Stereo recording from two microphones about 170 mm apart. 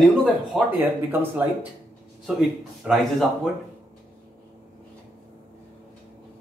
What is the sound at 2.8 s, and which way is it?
Speech, centre (ahead or behind).